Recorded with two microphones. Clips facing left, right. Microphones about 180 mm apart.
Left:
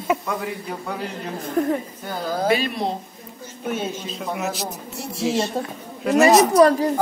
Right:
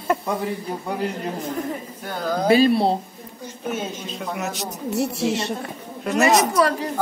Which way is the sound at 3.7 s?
Centre (ahead or behind).